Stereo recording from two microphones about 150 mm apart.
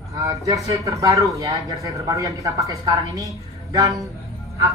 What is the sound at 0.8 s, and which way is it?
Speech, 20° right (ahead or behind).